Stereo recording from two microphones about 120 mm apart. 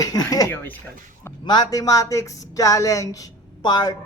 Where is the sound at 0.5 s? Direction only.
15° left (ahead or behind).